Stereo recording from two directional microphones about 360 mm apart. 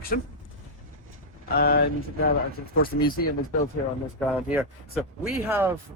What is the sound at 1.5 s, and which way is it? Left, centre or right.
Speech, left.